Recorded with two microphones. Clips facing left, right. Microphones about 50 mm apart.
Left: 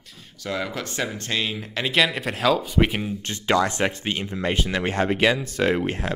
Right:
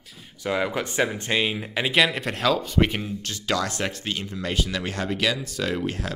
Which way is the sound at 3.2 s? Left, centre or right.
Left.